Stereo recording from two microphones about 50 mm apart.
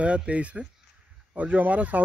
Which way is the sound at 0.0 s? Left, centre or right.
Right.